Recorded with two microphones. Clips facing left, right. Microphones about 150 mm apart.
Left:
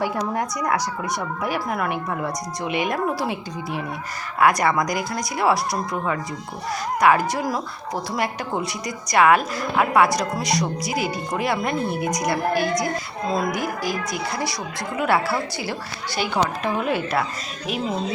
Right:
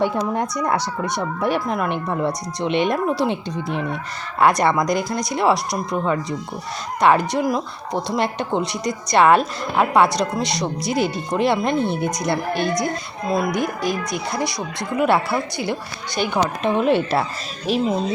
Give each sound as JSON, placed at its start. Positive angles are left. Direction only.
{"t": 0.0, "sound": "a woman's voice", "side_deg": -25}
{"t": 2.7, "sound": "a woman's voice", "side_deg": -25}
{"t": 13.2, "sound": "a woman's voice", "side_deg": -10}